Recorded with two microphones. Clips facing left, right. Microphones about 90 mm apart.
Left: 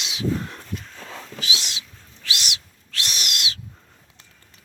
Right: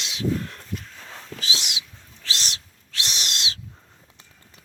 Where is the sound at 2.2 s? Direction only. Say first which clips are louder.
Left 1 dB; 35° right (ahead or behind).